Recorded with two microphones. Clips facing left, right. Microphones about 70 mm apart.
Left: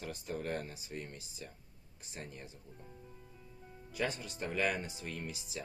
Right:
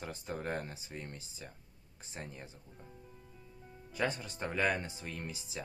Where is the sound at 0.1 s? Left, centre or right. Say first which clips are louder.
Even; right.